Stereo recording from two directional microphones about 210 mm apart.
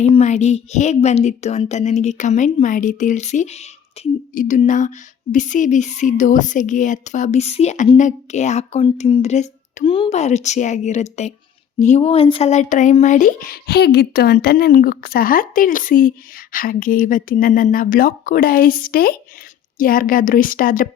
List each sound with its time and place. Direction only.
0.0 s speech: 30° left (ahead or behind)